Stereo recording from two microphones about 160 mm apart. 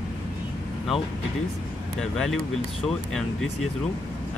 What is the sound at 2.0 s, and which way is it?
Speech, 5° left (ahead or behind).